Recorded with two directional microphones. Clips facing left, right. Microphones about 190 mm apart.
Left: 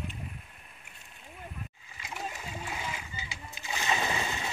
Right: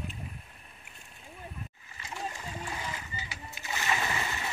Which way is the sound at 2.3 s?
10° left (ahead or behind).